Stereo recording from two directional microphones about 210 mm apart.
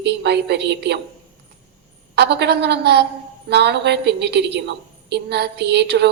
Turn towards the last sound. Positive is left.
turn(degrees=-50)  # may be behind; listen again after turning